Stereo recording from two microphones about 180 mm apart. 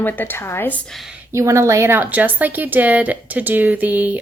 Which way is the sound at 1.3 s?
15° right (ahead or behind).